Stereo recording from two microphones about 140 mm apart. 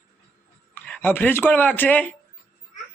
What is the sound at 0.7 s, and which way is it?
Speech, 10° left (ahead or behind).